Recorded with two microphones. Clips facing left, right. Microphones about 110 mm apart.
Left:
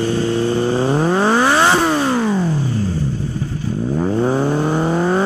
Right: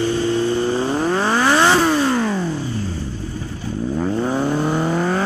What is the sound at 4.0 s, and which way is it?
Vehicle, 15° left (ahead or behind).